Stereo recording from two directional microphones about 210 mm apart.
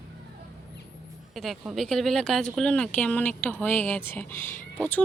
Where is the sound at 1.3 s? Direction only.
Centre (ahead or behind).